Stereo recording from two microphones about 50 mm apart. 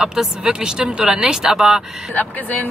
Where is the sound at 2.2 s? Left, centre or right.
Left.